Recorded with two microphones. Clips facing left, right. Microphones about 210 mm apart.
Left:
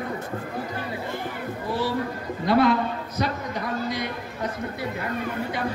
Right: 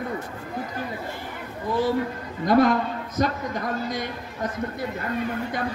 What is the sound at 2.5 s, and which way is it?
Speech, 45° right (ahead or behind).